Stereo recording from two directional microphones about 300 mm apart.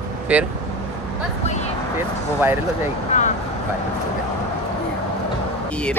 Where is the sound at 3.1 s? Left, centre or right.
Left.